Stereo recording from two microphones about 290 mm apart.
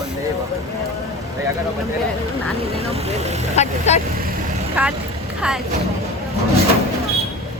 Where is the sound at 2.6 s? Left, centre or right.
Right.